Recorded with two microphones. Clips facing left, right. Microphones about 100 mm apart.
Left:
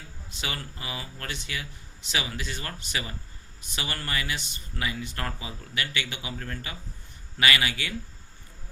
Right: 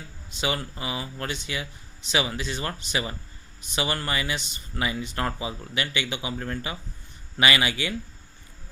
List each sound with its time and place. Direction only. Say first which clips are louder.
0.3 s speech: right 7 dB; 20° right (ahead or behind)